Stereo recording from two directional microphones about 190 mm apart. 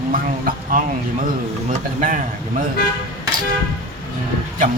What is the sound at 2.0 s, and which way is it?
Speech, 45° right (ahead or behind).